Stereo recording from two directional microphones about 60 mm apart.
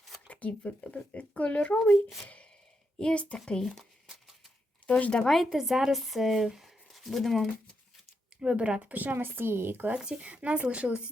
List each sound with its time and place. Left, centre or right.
0.3 s speech: left
3.0 s a woman's voice: centre
4.0 s a sound: centre
4.9 s speech: left
5.2 s speech: centre
8.4 s speech: centre; by 9.9 s right
9.9 s speech: centre